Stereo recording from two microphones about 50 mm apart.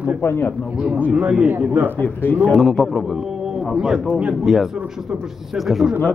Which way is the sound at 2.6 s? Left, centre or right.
Centre.